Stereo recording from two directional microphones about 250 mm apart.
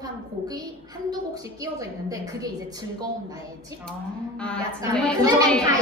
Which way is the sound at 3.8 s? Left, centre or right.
Centre.